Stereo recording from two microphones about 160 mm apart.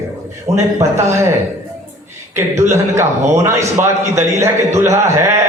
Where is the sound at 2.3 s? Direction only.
15° right (ahead or behind).